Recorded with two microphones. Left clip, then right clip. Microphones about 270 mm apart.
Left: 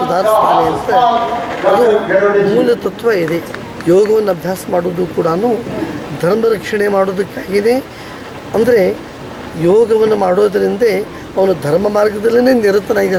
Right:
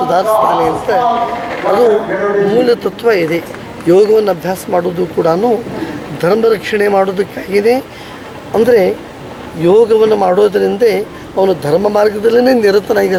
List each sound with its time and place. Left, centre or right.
0.1 s a man's voice: centre
11.7 s a man's voice: centre
11.9 s a man's voice: centre